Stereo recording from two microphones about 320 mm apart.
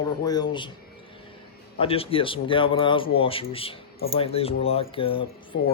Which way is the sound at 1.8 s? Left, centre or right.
Centre.